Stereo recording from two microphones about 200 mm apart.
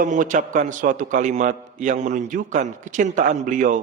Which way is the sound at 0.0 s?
40° right (ahead or behind).